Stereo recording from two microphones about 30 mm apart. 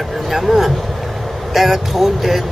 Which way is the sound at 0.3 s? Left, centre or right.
Centre.